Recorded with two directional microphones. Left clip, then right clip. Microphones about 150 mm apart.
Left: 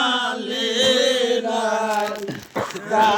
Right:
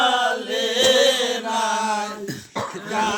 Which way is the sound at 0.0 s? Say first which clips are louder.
Right 2 dB; 30° right (ahead or behind).